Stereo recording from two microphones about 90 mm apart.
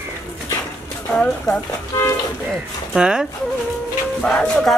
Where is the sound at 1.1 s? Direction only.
15° left (ahead or behind).